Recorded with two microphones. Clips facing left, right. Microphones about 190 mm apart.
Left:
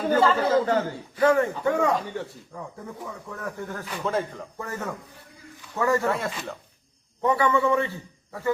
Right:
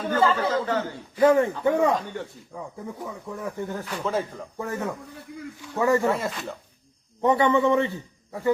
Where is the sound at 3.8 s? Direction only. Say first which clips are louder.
Left 2 dB; 5° left (ahead or behind).